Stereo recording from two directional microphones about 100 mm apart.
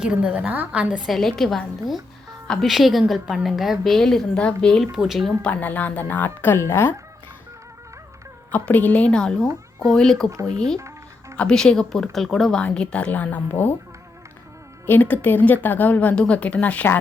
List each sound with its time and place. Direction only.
0.0 s a woman's voice: 10° right (ahead or behind)
1.1 s a woman's voice: centre (ahead or behind)
4.9 s a woman's voice: 5° right (ahead or behind)
5.4 s speech: 15° left (ahead or behind)
8.5 s a woman's voice: 15° left (ahead or behind)
10.8 s music: 30° right (ahead or behind)
11.3 s speech: 5° left (ahead or behind)
14.8 s speech: 20° left (ahead or behind)